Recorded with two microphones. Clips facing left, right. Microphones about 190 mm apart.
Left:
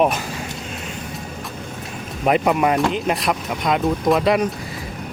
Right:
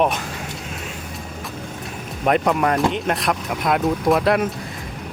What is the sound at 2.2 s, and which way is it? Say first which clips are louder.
Speech: left 1 dB; 5° left (ahead or behind).